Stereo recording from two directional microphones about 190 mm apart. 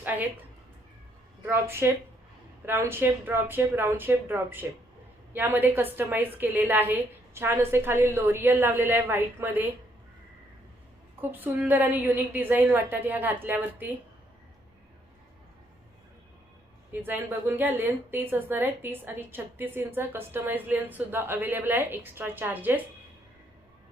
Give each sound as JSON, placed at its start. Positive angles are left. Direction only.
{"t": 0.0, "sound": "a sound", "side_deg": -10}
{"t": 1.4, "sound": "a woman's voice", "side_deg": -10}
{"t": 11.2, "sound": "a woman's voice", "side_deg": -10}
{"t": 16.9, "sound": "a woman's voice", "side_deg": -10}